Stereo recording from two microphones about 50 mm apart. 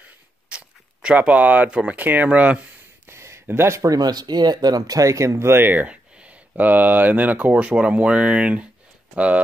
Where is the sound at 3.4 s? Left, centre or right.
Right.